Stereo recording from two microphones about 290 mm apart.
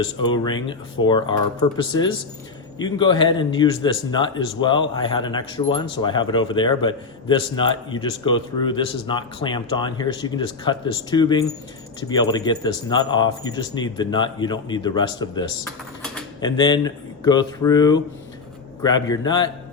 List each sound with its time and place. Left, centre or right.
0.0 s speech: centre